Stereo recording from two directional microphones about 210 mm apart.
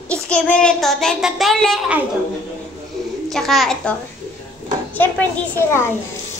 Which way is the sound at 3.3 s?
Centre (ahead or behind).